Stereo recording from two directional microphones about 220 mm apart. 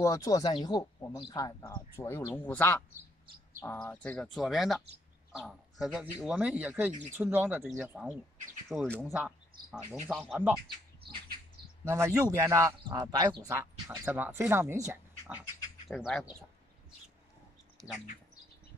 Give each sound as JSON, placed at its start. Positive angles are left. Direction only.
{"t": 0.0, "sound": "speech", "side_deg": 15}
{"t": 6.9, "sound": "speech", "side_deg": -30}
{"t": 7.2, "sound": "speech", "side_deg": -10}
{"t": 11.9, "sound": "speech", "side_deg": -15}
{"t": 15.9, "sound": "speech", "side_deg": 0}